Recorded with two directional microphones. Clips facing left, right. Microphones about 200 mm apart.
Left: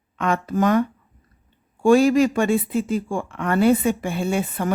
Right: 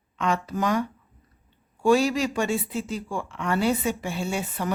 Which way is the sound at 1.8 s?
50° left (ahead or behind).